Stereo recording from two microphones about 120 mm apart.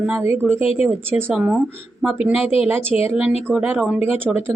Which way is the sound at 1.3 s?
5° right (ahead or behind).